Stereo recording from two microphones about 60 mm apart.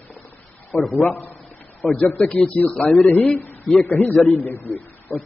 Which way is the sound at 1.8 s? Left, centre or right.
Left.